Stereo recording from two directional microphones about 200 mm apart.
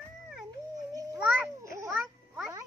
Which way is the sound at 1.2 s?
5° right (ahead or behind).